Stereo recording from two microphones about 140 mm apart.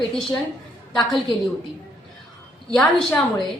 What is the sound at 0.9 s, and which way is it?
Speech, centre (ahead or behind).